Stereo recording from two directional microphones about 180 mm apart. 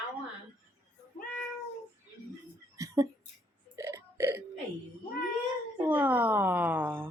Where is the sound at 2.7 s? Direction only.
20° right (ahead or behind).